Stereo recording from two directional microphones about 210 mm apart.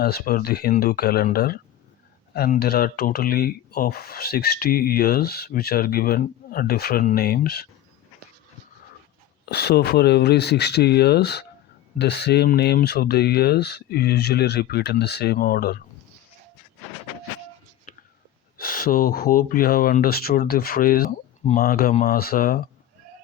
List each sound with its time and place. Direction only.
0.0 s speech: 45° left (ahead or behind)
9.5 s speech: 50° left (ahead or behind)
18.5 s speech: 45° left (ahead or behind)